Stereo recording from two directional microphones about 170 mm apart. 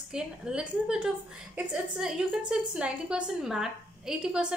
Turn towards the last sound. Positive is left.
turn(degrees=-5)  # may be behind; listen again after turning